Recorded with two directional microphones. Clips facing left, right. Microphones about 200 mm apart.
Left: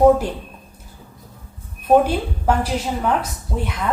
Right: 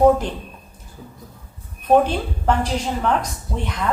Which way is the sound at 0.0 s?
10° left (ahead or behind).